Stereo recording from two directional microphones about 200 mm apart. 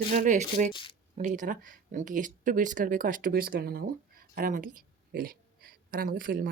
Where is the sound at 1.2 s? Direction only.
40° right (ahead or behind).